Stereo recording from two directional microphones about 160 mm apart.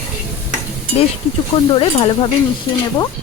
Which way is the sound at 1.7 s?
35° left (ahead or behind).